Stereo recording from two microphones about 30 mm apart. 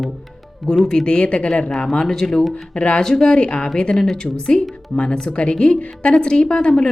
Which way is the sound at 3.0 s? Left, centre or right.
Centre.